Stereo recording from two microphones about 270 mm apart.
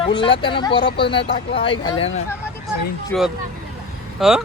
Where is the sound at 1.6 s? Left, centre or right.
Centre.